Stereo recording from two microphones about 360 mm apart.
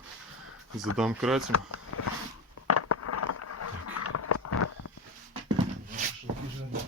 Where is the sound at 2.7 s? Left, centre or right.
Left.